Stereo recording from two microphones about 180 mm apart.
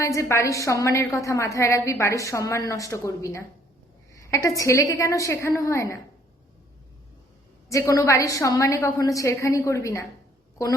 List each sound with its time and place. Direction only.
0.0 s a woman's voice: 15° left (ahead or behind)
7.7 s a woman's voice: 20° left (ahead or behind)